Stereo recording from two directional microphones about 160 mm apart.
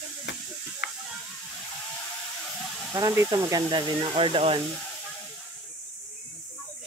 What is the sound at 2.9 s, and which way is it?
Speech, 20° right (ahead or behind).